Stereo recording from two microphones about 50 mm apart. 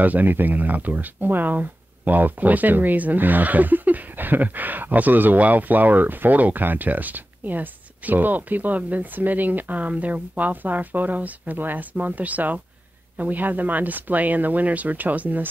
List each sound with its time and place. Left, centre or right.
0.0 s speech: right